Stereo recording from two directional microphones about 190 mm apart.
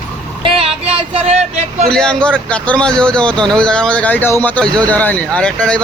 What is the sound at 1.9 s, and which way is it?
Speech, 5° left (ahead or behind).